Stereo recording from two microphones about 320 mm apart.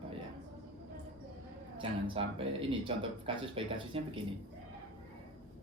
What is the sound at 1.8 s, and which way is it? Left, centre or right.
Speech, centre.